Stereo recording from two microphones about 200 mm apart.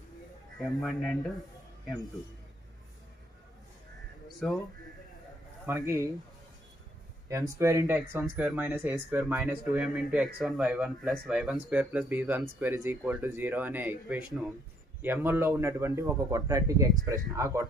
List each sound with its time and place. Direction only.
0.6 s speech: centre (ahead or behind)
5.7 s speech: 15° right (ahead or behind)
7.2 s speech: 15° right (ahead or behind)